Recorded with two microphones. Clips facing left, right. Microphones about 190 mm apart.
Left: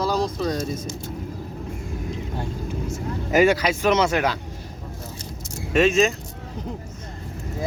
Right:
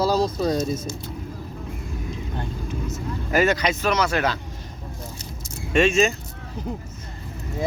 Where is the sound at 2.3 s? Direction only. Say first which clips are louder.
Left 1 dB; 10° left (ahead or behind).